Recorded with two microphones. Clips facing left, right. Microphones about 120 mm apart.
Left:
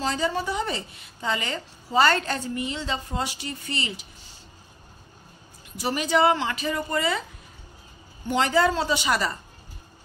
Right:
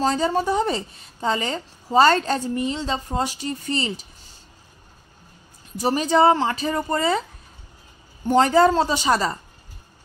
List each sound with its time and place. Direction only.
0.0 s a woman's voice: 40° right (ahead or behind)
5.8 s a woman's voice: 35° right (ahead or behind)
8.3 s a woman's voice: 40° right (ahead or behind)